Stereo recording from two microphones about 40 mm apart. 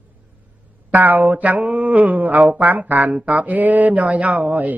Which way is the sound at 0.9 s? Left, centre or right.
Right.